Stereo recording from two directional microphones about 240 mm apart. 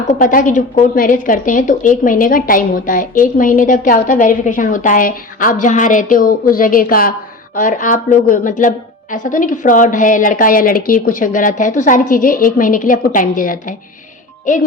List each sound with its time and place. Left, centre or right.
0.1 s a woman's voice: left